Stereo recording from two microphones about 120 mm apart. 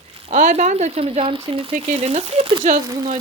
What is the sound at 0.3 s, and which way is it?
Speech, 75° right (ahead or behind).